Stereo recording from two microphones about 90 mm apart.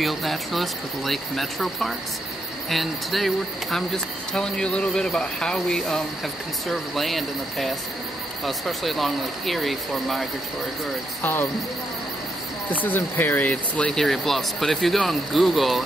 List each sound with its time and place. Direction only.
0.0 s speech: centre (ahead or behind)
12.6 s speech: 20° left (ahead or behind)
14.0 s speech: centre (ahead or behind)